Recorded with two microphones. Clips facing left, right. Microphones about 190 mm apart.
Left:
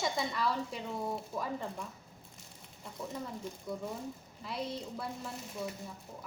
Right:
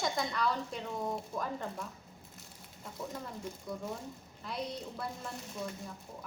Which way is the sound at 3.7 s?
Centre (ahead or behind).